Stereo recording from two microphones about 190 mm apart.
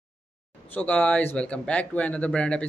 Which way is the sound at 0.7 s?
10° left (ahead or behind).